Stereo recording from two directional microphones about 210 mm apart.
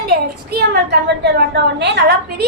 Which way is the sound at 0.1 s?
50° right (ahead or behind).